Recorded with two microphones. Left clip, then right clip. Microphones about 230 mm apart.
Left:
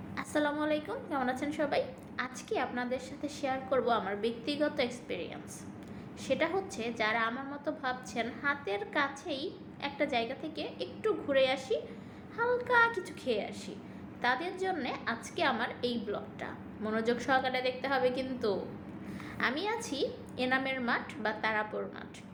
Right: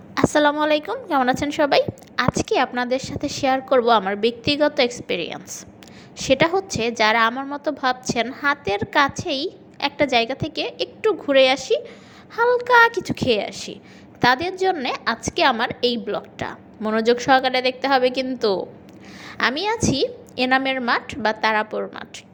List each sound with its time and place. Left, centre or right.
0.1 s a woman's voice: right